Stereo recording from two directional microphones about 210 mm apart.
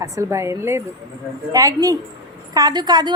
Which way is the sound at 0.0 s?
15° right (ahead or behind).